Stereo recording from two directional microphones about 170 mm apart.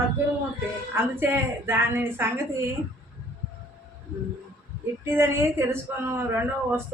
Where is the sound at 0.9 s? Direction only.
15° right (ahead or behind).